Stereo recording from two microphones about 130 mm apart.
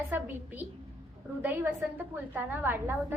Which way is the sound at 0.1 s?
15° right (ahead or behind).